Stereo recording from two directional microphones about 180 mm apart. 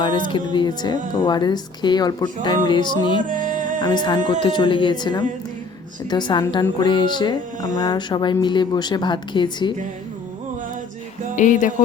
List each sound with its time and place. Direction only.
0.0 s a woman's voice: 25° left (ahead or behind)
3.2 s music: 45° right (ahead or behind)
3.8 s a woman's voice: 25° left (ahead or behind)
11.3 s speech: 45° left (ahead or behind)